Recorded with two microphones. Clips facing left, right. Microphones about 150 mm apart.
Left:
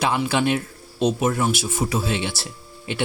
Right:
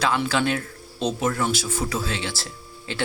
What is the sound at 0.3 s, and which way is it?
Speech, 20° left (ahead or behind).